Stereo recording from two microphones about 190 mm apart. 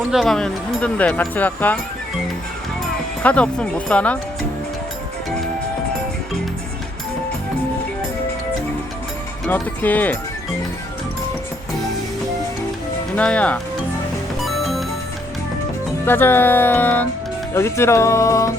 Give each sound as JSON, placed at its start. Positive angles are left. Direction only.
{"t": 0.1, "sound": "speech", "side_deg": 0}
{"t": 3.2, "sound": "speech", "side_deg": 5}
{"t": 9.5, "sound": "speech", "side_deg": 10}
{"t": 13.1, "sound": "speech", "side_deg": 5}
{"t": 14.4, "sound": "music", "side_deg": 0}
{"t": 16.0, "sound": "speech", "side_deg": 10}